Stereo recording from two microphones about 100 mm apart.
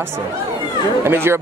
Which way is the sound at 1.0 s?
25° right (ahead or behind).